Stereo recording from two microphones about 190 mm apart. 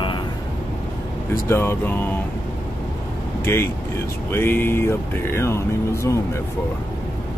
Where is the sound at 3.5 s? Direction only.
15° left (ahead or behind).